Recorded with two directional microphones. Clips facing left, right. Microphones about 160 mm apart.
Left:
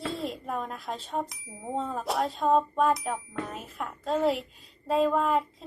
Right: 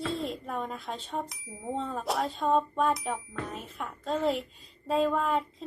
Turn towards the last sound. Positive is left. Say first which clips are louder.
# left 2 dB
turn(degrees=5)  # may be behind; listen again after turning